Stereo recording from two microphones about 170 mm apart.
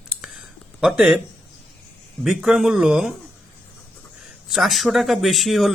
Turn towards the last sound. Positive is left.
turn(degrees=0)  # may be behind; listen again after turning